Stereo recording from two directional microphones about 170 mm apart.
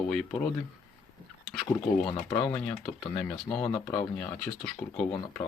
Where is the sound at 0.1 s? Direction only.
5° left (ahead or behind).